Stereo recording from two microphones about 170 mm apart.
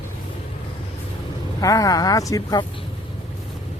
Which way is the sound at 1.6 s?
20° left (ahead or behind).